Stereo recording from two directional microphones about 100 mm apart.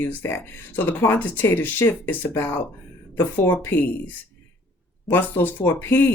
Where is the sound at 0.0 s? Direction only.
20° left (ahead or behind).